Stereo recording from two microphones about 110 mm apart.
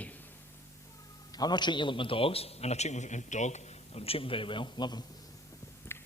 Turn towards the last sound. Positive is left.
turn(degrees=20)  # may be behind; listen again after turning